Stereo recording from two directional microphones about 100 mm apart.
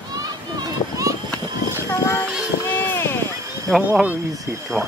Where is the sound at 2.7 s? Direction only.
20° left (ahead or behind).